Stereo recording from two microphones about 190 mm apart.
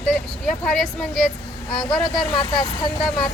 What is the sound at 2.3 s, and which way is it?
Speech, 25° left (ahead or behind).